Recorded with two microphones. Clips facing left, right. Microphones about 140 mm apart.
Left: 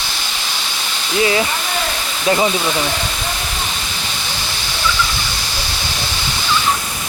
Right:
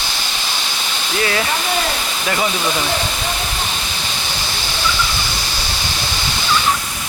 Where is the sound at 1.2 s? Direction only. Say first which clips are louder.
Left 4 dB; 20° left (ahead or behind).